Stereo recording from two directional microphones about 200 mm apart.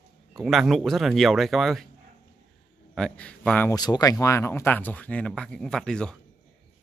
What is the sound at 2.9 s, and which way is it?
Speech, 5° left (ahead or behind).